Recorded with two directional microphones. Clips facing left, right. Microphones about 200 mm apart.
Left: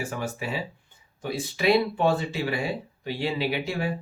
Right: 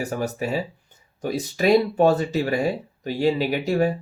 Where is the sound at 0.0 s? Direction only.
40° right (ahead or behind).